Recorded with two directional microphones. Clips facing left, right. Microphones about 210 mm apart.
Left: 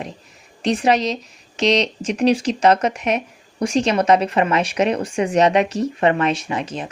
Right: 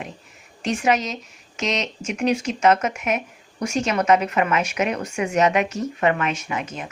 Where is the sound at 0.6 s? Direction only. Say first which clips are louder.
Left 4 dB; 35° left (ahead or behind).